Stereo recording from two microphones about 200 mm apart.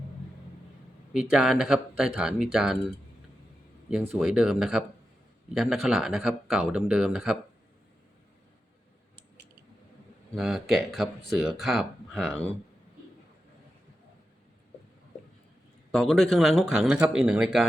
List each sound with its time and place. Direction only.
1.1 s speech: 5° right (ahead or behind)
4.2 s speech: 5° right (ahead or behind)
10.3 s speech: centre (ahead or behind)
15.9 s speech: centre (ahead or behind)